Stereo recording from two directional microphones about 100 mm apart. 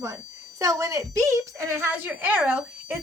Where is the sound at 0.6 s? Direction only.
30° right (ahead or behind).